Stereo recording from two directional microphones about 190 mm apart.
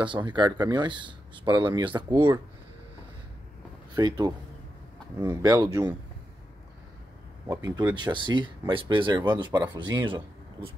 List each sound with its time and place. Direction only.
0.0 s speech: 25° right (ahead or behind)
3.9 s speech: 20° right (ahead or behind)
7.4 s speech: 20° right (ahead or behind)